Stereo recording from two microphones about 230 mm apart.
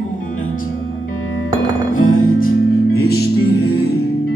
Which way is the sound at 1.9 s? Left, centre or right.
Left.